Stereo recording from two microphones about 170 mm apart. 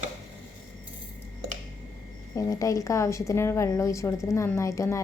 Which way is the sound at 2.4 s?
20° left (ahead or behind).